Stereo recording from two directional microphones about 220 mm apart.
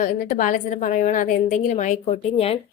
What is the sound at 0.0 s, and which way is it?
A woman's voice, 35° left (ahead or behind).